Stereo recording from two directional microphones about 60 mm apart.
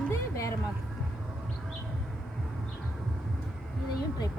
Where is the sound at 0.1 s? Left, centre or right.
Left.